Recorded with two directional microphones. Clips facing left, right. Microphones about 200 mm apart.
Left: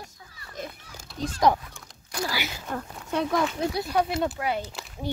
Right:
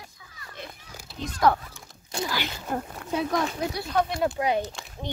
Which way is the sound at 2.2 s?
10° left (ahead or behind).